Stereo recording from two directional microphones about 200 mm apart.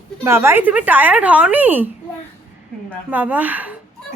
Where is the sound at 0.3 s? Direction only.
10° right (ahead or behind).